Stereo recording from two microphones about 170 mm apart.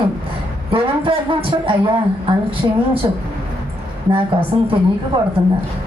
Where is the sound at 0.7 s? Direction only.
30° right (ahead or behind).